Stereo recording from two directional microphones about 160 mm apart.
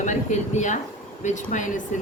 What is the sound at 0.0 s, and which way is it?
A woman's voice, 50° left (ahead or behind).